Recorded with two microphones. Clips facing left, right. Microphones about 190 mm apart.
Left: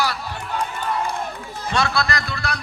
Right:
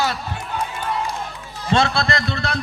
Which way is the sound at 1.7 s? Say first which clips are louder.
Right 3 dB; 25° right (ahead or behind).